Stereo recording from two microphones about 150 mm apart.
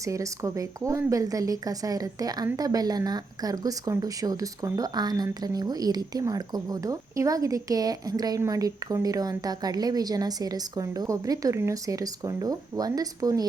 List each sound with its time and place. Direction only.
0.0 s speech: 20° right (ahead or behind)